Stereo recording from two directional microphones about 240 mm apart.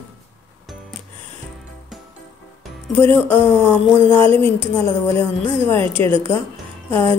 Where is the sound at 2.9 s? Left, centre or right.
Centre.